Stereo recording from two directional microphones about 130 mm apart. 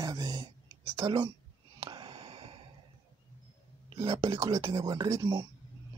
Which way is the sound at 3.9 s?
30° right (ahead or behind).